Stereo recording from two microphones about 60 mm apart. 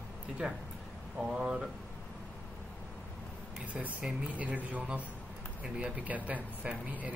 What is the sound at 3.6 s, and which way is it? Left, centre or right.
Speech, right.